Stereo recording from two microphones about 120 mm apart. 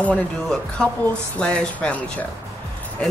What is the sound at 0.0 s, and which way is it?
Speech, 5° left (ahead or behind).